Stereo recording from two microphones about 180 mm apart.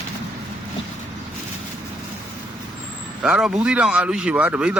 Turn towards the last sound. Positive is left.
turn(degrees=-5)  # may be behind; listen again after turning